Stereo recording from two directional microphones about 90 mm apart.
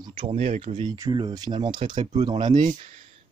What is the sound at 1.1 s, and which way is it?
Speech, 50° right (ahead or behind).